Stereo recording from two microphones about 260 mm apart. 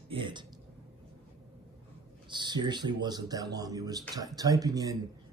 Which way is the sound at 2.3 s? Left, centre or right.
Centre.